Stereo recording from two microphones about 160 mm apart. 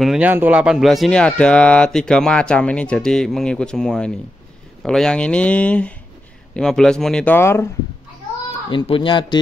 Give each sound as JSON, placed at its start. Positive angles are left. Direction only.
{"t": 0.0, "sound": "speech", "side_deg": -5}
{"t": 7.3, "sound": "speech", "side_deg": 15}
{"t": 8.6, "sound": "speech", "side_deg": 30}